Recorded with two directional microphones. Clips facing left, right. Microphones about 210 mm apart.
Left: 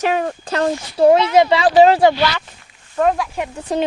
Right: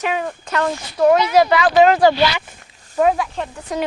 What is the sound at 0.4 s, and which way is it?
Speech, 30° left (ahead or behind).